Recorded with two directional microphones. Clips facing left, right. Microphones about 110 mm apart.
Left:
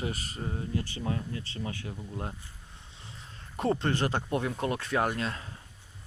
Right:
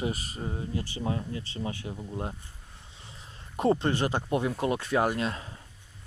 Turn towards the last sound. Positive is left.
turn(degrees=-20)  # may be behind; listen again after turning